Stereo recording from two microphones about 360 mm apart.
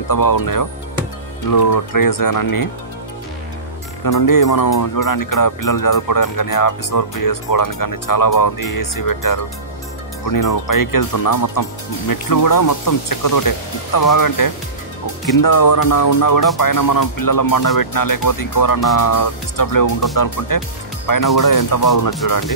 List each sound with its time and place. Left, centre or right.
0.1 s speech: left
4.0 s speech: left